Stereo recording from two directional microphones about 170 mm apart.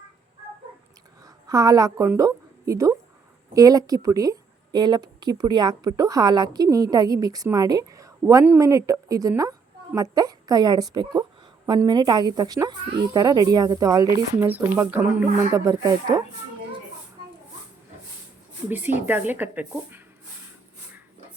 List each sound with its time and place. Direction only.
1.2 s a woman's voice: 20° right (ahead or behind)
14.4 s speech: 10° right (ahead or behind)
15.5 s speech: 20° right (ahead or behind)
19.0 s speech: 10° right (ahead or behind)